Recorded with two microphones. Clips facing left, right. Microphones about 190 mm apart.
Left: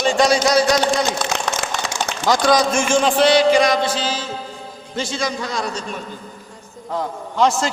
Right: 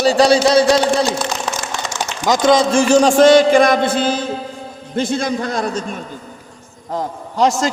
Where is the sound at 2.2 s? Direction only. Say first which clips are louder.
Right 3 dB; 20° right (ahead or behind); by 6.0 s 50° right (ahead or behind).